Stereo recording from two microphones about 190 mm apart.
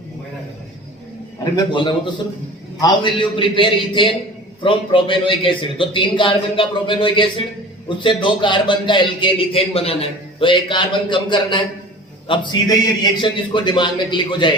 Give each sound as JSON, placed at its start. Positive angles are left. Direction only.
{"t": 1.5, "sound": "a man's voice", "side_deg": 25}